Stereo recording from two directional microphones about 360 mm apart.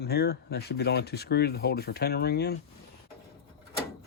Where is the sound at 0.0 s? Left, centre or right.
Left.